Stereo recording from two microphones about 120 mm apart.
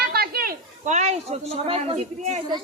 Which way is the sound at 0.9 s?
75° right (ahead or behind).